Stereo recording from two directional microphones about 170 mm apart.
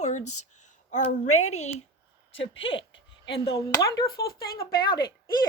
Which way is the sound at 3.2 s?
90° left.